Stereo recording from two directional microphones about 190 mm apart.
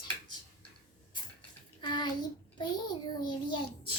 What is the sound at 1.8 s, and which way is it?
A child's voice, 25° left (ahead or behind).